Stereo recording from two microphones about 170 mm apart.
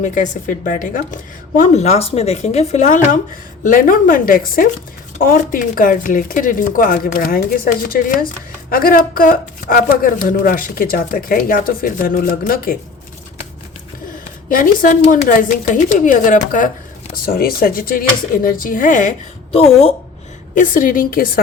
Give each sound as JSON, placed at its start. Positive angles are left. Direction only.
{"t": 0.0, "sound": "a woman's voice", "side_deg": 50}
{"t": 14.5, "sound": "a woman's voice", "side_deg": 55}
{"t": 19.5, "sound": "speech", "side_deg": 35}
{"t": 20.6, "sound": "speech", "side_deg": 55}